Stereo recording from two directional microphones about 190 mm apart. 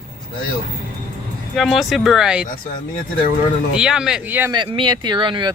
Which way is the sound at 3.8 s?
5° right (ahead or behind).